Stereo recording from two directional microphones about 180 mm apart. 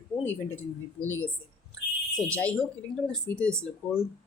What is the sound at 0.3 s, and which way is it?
Speech, 10° left (ahead or behind).